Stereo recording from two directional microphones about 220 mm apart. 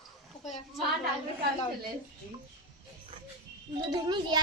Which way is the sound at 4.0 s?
20° right (ahead or behind).